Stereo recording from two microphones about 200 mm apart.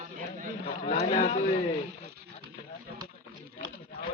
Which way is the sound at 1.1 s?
40° left (ahead or behind).